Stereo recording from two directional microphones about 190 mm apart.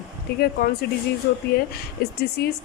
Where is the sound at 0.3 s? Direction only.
55° left (ahead or behind).